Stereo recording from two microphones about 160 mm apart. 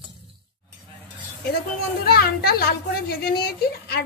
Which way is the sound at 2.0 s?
75° left (ahead or behind).